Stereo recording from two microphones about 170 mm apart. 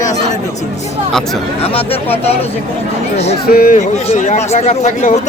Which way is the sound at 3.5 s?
55° left (ahead or behind).